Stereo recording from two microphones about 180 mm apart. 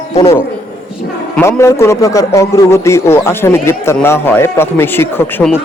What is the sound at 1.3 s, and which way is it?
A man's voice, 15° left (ahead or behind).